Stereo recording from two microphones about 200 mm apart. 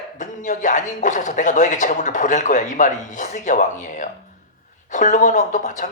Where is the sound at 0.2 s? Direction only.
40° left (ahead or behind).